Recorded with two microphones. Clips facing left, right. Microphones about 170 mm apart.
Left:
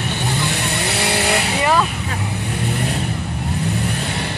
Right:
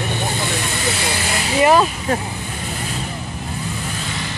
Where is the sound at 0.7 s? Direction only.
65° left (ahead or behind).